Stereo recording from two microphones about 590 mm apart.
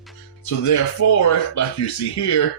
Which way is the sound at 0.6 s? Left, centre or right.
Left.